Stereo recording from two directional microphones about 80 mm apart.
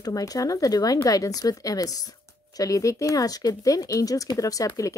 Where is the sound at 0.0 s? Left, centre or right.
Left.